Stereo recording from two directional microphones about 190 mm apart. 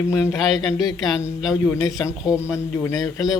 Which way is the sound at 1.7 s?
15° left (ahead or behind).